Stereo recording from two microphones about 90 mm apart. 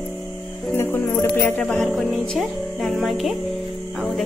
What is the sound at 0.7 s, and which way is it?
Music, 25° left (ahead or behind).